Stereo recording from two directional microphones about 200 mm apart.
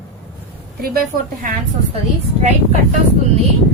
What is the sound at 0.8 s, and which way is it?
Speech, 45° right (ahead or behind).